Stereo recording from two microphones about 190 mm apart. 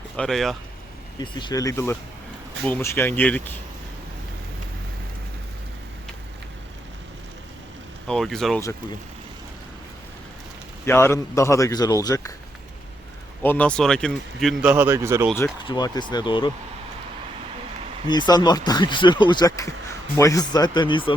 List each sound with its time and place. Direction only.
0.2 s speech: centre (ahead or behind)
1.2 s a man's voice: 25° left (ahead or behind)
8.0 s speech: 5° left (ahead or behind)
10.8 s a man's voice: 15° left (ahead or behind)
13.4 s speech: 10° left (ahead or behind)
14.6 s speech: 5° right (ahead or behind)
15.6 s speech: 25° left (ahead or behind)
18.1 s speech: 20° left (ahead or behind)